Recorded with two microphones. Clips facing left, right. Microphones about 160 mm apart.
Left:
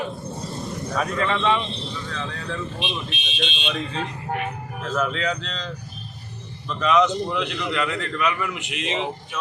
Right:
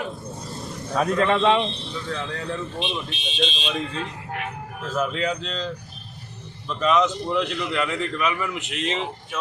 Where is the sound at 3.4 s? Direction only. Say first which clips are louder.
Right 2 dB; 35° right (ahead or behind).